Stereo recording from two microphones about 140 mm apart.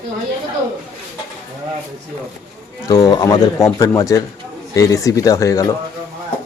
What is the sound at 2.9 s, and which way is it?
Speech, 30° left (ahead or behind).